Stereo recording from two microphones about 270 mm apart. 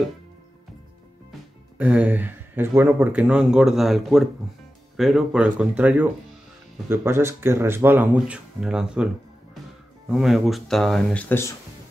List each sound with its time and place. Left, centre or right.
1.8 s speech: centre
10.1 s speech: centre